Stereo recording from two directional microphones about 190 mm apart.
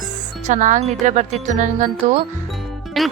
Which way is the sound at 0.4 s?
40° right (ahead or behind).